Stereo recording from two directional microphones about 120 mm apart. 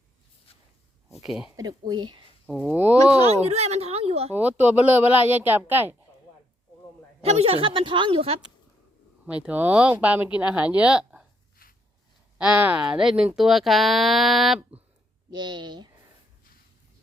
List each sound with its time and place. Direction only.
1.5 s speech: 35° right (ahead or behind)
2.5 s speech: 10° right (ahead or behind)
3.1 s speech: 60° right (ahead or behind)
4.4 s speech: 10° right (ahead or behind)
7.2 s a woman's voice: 60° right (ahead or behind)
9.2 s speech: 10° right (ahead or behind)
12.4 s speech: 10° right (ahead or behind)
15.3 s speech: 40° right (ahead or behind)